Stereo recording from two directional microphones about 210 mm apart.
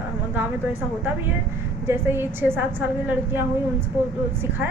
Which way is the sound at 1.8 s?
10° right (ahead or behind).